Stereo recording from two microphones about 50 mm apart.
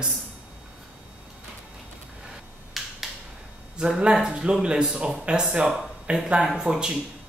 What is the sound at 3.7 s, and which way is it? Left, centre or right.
Speech, centre.